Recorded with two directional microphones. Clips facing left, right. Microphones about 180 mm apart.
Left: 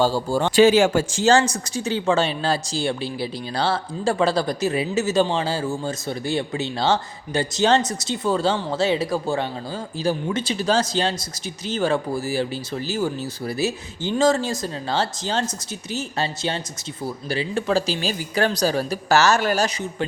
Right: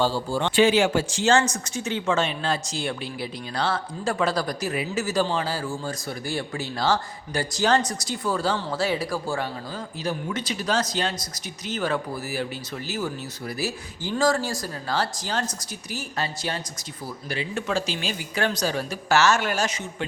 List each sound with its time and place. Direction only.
0.0 s speech: 45° left (ahead or behind)